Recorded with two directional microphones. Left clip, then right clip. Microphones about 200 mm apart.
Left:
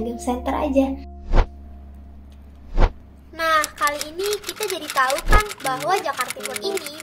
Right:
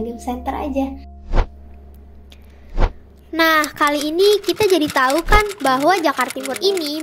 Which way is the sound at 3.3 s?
50° right (ahead or behind).